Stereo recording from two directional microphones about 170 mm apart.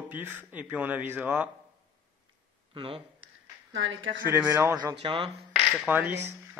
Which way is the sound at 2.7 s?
30° right (ahead or behind).